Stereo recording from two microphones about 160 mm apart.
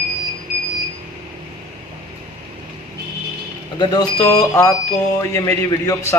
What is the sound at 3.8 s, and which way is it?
Speech, 25° left (ahead or behind).